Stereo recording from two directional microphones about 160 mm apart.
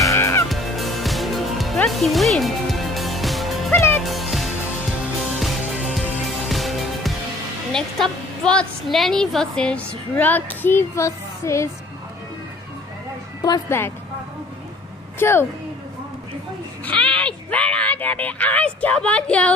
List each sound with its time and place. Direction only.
0.0 s music: 20° left (ahead or behind)
0.5 s music: centre (ahead or behind)
6.5 s music: centre (ahead or behind)
7.7 s a woman's voice: 5° left (ahead or behind)
13.4 s a woman's voice: 20° left (ahead or behind)
15.1 s a woman's voice: 15° left (ahead or behind)
16.8 s a woman's voice: 5° left (ahead or behind)